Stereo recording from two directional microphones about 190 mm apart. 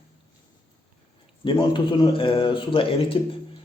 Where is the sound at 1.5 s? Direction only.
25° left (ahead or behind).